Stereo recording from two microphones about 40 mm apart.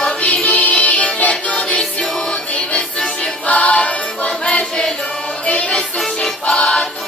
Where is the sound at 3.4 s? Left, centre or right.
Left.